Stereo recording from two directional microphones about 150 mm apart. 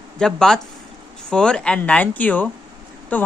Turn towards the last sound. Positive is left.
turn(degrees=10)  # may be behind; listen again after turning